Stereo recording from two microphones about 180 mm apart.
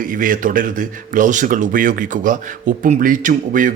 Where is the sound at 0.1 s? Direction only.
50° right (ahead or behind).